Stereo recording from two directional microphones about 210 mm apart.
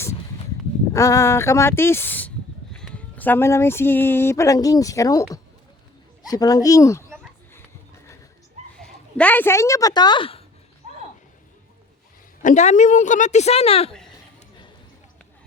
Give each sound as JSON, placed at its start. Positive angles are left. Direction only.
{"t": 0.9, "sound": "speech", "side_deg": 15}
{"t": 6.2, "sound": "speech", "side_deg": 15}
{"t": 8.8, "sound": "speech", "side_deg": 5}
{"t": 12.4, "sound": "a woman's voice", "side_deg": 35}